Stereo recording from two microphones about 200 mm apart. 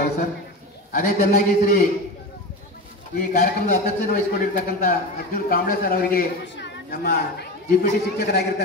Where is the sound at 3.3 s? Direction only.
35° left (ahead or behind).